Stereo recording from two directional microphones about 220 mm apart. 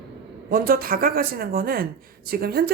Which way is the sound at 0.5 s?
40° right (ahead or behind).